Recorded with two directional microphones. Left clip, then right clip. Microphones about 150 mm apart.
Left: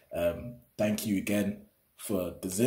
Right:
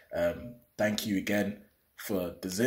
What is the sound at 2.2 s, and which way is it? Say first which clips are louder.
Speech: left 1 dB; 10° left (ahead or behind).